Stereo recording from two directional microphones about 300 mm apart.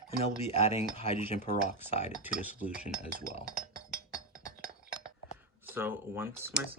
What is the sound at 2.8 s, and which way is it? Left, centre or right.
Cutlery, left.